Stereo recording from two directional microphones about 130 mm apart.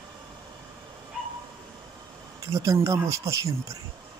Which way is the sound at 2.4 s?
25° right (ahead or behind).